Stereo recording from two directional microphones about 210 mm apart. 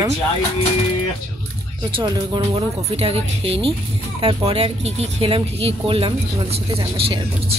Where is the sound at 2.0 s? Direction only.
25° right (ahead or behind).